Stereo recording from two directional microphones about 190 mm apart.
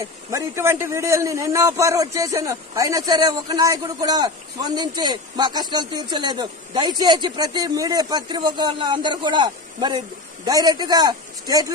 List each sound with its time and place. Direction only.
0.0 s a man's voice: 15° right (ahead or behind)